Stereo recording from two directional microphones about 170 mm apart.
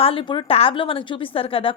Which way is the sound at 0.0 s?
35° left (ahead or behind).